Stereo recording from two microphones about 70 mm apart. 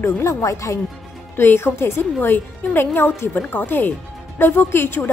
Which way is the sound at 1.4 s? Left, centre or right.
Left.